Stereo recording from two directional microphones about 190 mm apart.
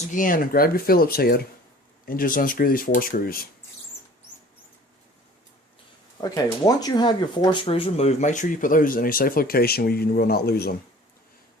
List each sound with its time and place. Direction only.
0.1 s speech: 45° left (ahead or behind)
6.1 s speech: 20° left (ahead or behind); by 10.8 s 55° left (ahead or behind)